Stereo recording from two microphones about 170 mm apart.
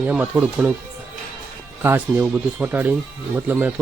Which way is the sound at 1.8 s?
10° right (ahead or behind).